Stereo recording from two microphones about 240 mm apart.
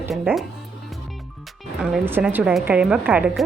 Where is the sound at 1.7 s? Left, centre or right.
Centre.